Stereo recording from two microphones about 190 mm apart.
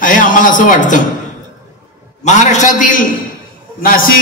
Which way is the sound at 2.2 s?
40° left (ahead or behind).